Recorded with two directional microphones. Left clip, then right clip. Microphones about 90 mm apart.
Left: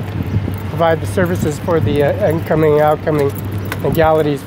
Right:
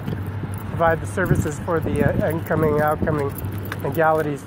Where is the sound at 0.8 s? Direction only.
40° left (ahead or behind).